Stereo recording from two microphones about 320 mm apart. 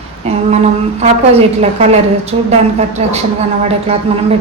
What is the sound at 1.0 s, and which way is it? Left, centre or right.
A woman's voice, centre.